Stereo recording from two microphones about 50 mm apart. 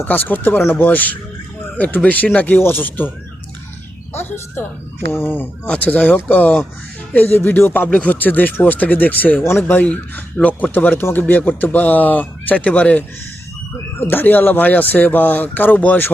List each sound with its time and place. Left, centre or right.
0.0 s speech: left
2.6 s speech: left
4.1 s speech: left
5.8 s speech: left
7.3 s speech: left
9.4 s speech: left
9.6 s speech: left
14.0 s speech: left